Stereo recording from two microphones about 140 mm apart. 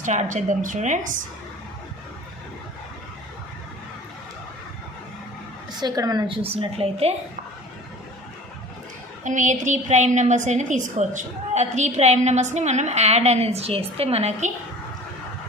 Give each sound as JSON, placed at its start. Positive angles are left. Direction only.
{"t": 0.0, "sound": "a woman's voice", "side_deg": -60}
{"t": 5.7, "sound": "a woman's voice", "side_deg": -30}
{"t": 9.2, "sound": "a woman's voice", "side_deg": -60}